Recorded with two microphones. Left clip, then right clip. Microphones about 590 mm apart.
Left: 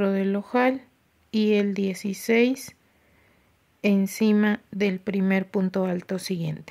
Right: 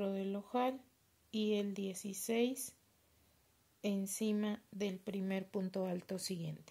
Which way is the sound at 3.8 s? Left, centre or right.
Right.